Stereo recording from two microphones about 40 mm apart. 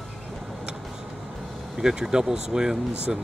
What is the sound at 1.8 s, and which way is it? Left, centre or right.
Speech, centre.